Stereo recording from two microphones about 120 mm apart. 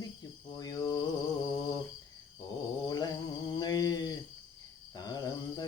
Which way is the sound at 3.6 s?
35° left (ahead or behind).